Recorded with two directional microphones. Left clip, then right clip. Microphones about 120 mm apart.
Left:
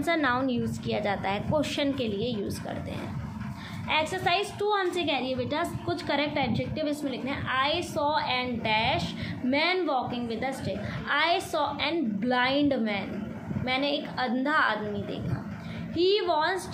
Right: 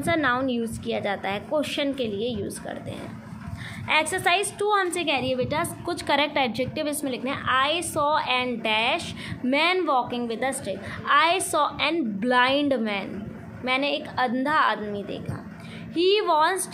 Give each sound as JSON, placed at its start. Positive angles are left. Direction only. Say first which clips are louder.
{"t": 0.0, "sound": "a woman's voice", "louder": "right 3 dB", "side_deg": -20}
{"t": 3.9, "sound": "a woman's voice", "louder": "right 4 dB", "side_deg": -40}
{"t": 15.9, "sound": "a woman's voice", "louder": "right 4 dB", "side_deg": -50}